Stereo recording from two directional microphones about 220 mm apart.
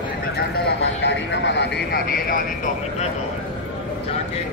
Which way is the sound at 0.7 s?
55° left (ahead or behind).